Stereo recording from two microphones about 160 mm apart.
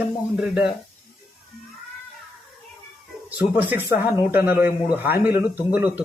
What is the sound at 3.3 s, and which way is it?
A man's voice, 10° right (ahead or behind).